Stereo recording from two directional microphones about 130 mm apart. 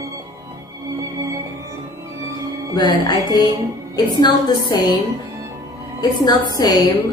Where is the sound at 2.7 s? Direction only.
30° left (ahead or behind).